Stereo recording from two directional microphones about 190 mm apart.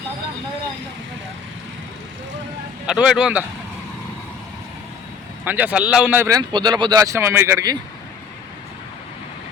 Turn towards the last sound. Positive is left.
turn(degrees=-15)  # may be behind; listen again after turning